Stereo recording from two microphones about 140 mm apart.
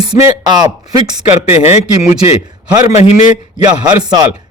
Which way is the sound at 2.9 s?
45° left (ahead or behind).